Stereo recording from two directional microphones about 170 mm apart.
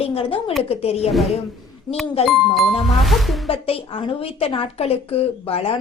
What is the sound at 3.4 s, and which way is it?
A woman's voice, 35° left (ahead or behind).